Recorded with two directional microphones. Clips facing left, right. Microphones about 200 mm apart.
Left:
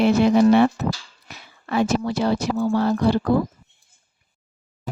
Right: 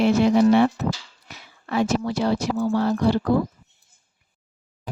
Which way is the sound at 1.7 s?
60° left (ahead or behind).